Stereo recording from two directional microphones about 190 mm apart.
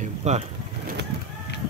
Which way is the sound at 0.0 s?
35° right (ahead or behind).